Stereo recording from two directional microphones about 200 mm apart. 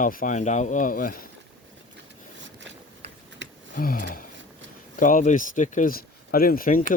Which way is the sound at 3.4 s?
65° right (ahead or behind).